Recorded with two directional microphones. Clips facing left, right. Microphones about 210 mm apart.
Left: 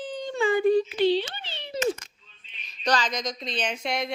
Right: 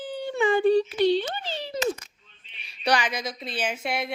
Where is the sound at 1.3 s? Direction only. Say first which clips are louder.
Right 8 dB; 40° right (ahead or behind).